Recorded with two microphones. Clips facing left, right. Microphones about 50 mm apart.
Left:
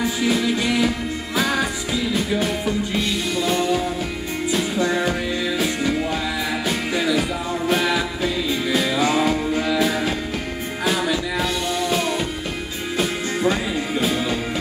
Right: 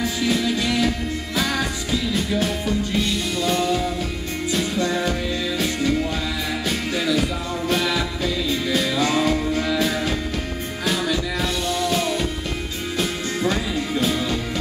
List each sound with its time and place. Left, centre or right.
0.3 s music: centre
11.8 s music: centre